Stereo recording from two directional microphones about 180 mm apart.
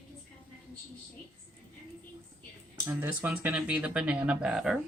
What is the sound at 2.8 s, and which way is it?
Speech, 15° right (ahead or behind).